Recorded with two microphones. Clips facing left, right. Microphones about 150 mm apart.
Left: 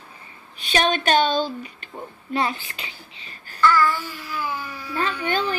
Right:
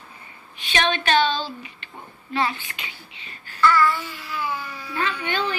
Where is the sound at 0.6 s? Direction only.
40° left (ahead or behind).